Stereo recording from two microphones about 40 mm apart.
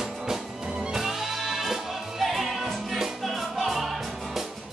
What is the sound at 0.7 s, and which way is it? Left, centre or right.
Music, right.